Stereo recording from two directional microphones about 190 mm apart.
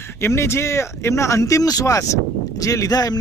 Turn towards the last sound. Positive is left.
turn(degrees=20)  # may be behind; listen again after turning